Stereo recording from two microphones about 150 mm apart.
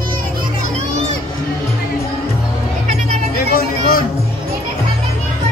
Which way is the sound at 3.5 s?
75° left (ahead or behind).